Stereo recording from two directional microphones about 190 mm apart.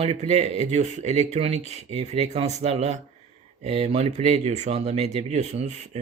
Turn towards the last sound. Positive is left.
turn(degrees=-35)  # may be behind; listen again after turning